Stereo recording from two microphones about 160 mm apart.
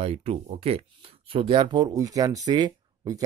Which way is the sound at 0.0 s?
40° right (ahead or behind).